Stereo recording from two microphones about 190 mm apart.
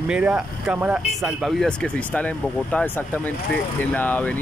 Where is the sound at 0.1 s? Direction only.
5° right (ahead or behind).